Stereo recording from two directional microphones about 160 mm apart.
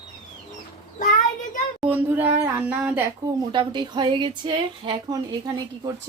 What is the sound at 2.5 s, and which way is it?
Speech, 10° right (ahead or behind).